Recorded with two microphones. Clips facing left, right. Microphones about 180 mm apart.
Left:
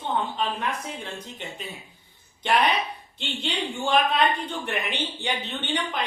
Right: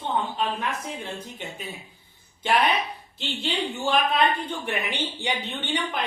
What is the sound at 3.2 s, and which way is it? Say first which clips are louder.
A woman's voice: right 2 dB; 5° right (ahead or behind).